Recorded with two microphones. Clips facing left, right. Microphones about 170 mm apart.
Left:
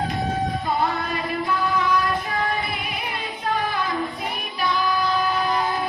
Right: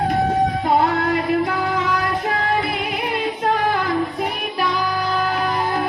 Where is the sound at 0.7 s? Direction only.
75° right (ahead or behind).